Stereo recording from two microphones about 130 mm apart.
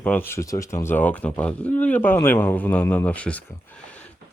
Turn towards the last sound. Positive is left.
turn(degrees=10)  # may be behind; listen again after turning